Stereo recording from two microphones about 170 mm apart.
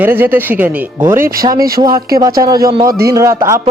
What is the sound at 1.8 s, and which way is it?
Speech, 25° right (ahead or behind).